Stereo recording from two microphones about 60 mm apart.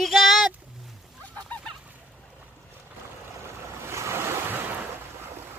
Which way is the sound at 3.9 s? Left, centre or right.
Right.